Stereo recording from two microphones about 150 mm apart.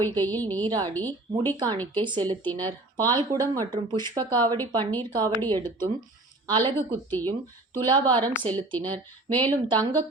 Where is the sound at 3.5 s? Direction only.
30° right (ahead or behind).